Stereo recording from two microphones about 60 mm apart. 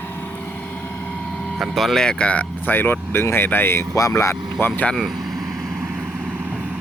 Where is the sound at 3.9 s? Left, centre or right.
Left.